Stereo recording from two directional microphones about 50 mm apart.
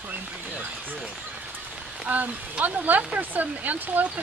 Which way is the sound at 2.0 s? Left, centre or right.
Right.